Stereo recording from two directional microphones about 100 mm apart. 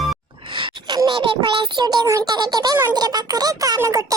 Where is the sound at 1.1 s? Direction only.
60° right (ahead or behind); by 2.8 s 45° right (ahead or behind).